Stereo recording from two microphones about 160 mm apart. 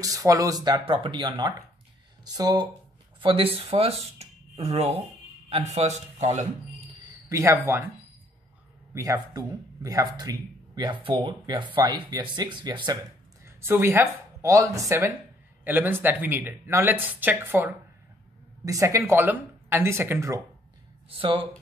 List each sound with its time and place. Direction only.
0.0 s a man's voice: 20° right (ahead or behind); by 6.4 s 45° right (ahead or behind)
7.2 s speech: 20° right (ahead or behind)
8.9 s speech: 20° right (ahead or behind)
13.6 s speech: 15° right (ahead or behind)
21.2 s speech: 35° right (ahead or behind)